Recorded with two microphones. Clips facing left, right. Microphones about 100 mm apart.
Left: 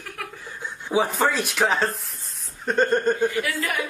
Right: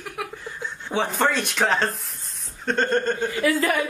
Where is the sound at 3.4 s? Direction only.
35° right (ahead or behind).